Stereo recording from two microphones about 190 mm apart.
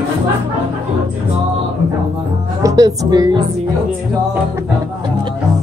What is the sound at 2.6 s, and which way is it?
Speech, 20° right (ahead or behind).